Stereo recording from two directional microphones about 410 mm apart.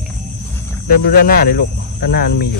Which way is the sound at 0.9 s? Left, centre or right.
Left.